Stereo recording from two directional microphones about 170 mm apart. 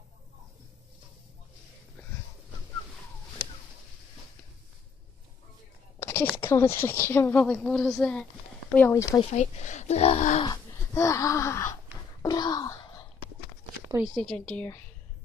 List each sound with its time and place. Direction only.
5.9 s speech: 15° left (ahead or behind)
9.2 s speech: 45° left (ahead or behind)
10.4 s gasp: 20° left (ahead or behind)
13.9 s speech: 5° right (ahead or behind)